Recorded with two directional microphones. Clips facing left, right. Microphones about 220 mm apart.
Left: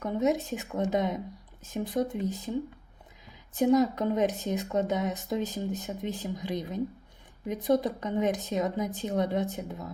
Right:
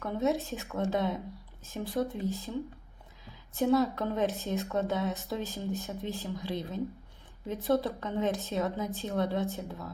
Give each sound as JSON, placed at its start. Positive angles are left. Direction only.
{"t": 0.0, "sound": "a woman's voice", "side_deg": 15}